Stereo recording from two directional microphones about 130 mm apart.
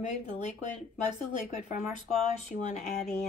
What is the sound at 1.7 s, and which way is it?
Speech, 65° left (ahead or behind).